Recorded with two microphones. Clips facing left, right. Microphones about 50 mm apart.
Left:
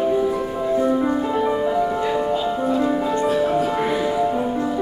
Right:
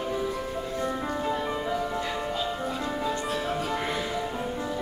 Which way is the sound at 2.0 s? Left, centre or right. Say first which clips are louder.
Left 9 dB; centre.